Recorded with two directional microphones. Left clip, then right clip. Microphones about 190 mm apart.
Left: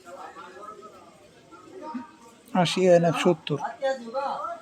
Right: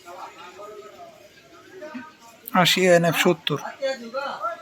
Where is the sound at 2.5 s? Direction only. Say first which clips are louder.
Right 3 dB; centre (ahead or behind).